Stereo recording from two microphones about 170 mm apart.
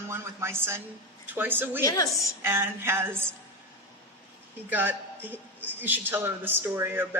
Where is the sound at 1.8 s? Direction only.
20° left (ahead or behind).